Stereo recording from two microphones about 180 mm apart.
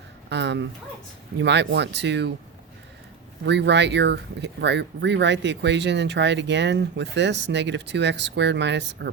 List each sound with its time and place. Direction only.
0.3 s a sound: 75° right (ahead or behind)
1.4 s speech: 75° right (ahead or behind)
3.4 s speech: 75° right (ahead or behind)